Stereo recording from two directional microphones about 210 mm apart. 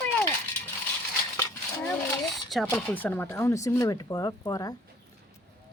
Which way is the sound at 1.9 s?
Centre (ahead or behind).